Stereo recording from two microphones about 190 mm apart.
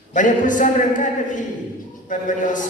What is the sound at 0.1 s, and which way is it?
A woman's voice, 40° left (ahead or behind).